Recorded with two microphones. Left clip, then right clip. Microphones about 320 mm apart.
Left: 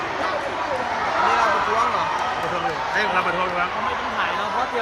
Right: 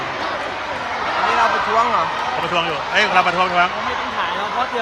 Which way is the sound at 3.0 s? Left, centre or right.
Centre.